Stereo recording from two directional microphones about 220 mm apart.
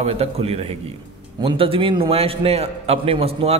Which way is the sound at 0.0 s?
25° right (ahead or behind).